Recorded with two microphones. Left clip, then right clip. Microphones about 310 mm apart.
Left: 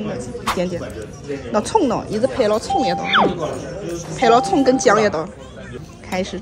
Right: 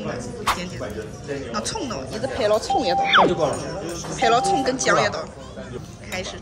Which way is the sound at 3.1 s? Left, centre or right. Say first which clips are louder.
Even; centre.